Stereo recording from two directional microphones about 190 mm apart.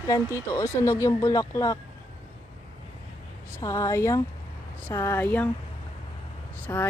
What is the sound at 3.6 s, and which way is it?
Speech, 15° left (ahead or behind).